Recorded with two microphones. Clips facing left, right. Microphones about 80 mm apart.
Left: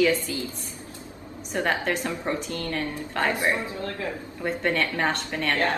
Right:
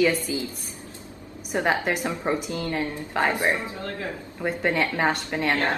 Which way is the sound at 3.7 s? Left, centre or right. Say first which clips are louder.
Left 1 dB; right.